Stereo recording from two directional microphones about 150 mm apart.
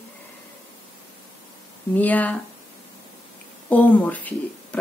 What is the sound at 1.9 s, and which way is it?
Speech, 10° left (ahead or behind).